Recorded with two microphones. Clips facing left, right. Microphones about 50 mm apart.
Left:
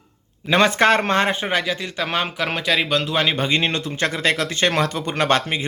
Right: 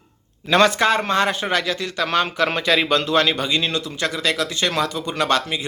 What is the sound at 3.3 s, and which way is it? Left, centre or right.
A man's voice, left.